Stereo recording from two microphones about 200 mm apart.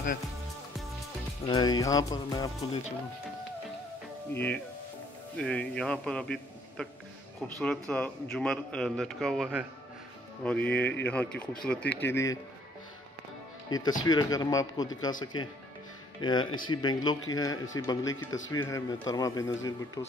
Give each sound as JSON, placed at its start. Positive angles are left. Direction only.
{"t": 1.4, "sound": "speech", "side_deg": 20}
{"t": 4.3, "sound": "a man's voice", "side_deg": 10}
{"t": 13.7, "sound": "speech", "side_deg": 20}